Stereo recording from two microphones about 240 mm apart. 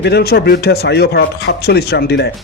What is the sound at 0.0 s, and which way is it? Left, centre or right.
Speech, left.